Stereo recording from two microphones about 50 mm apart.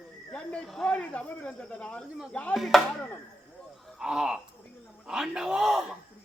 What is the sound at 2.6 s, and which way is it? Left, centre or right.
Speech, centre.